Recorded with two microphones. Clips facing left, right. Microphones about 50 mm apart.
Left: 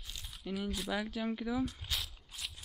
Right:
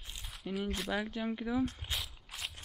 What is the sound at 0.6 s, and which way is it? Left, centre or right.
Speech, right.